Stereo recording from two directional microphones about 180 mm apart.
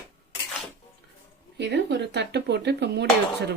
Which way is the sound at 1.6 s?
75° right (ahead or behind).